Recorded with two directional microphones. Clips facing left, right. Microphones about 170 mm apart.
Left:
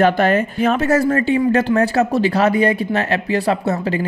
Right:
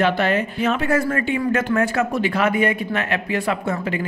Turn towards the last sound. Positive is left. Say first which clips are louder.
# left 4 dB
turn(degrees=35)  # may be behind; listen again after turning